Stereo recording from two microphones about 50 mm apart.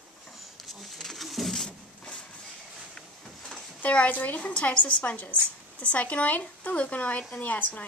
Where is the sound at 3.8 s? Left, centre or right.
Left.